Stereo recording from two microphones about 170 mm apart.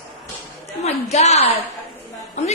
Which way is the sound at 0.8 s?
40° left (ahead or behind).